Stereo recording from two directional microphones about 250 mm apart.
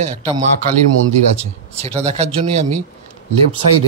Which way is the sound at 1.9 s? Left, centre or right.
Right.